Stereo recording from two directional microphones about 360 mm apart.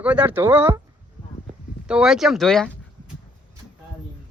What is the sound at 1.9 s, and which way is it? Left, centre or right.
Speech, centre.